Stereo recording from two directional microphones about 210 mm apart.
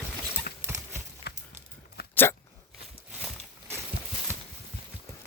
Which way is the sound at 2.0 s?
50° left (ahead or behind).